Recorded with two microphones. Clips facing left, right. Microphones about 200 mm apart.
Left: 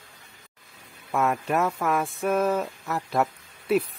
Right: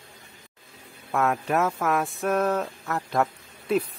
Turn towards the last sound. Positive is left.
turn(degrees=5)  # may be behind; listen again after turning